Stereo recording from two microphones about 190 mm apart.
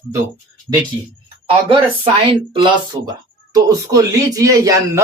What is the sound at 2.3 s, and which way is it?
A man's voice, 25° right (ahead or behind).